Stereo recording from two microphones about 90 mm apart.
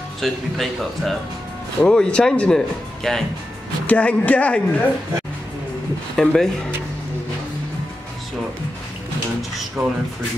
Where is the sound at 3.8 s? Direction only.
15° left (ahead or behind).